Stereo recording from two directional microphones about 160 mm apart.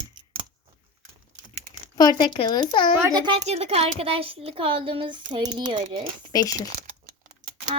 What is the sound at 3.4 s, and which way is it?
Speech, 40° right (ahead or behind).